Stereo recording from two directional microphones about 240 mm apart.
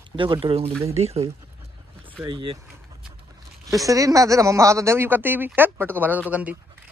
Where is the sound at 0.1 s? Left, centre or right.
Centre.